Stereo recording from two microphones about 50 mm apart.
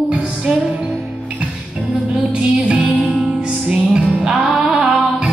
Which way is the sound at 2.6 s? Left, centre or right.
Right.